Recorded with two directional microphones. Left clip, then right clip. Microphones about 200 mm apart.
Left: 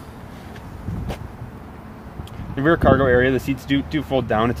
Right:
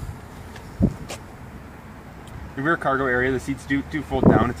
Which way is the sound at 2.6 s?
45° left (ahead or behind).